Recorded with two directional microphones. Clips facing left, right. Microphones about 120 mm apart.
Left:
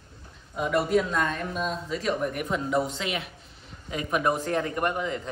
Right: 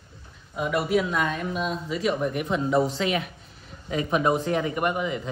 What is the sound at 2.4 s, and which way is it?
Speech, 30° right (ahead or behind).